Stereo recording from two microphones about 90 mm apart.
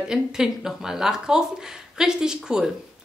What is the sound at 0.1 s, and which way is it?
Speech, 5° right (ahead or behind).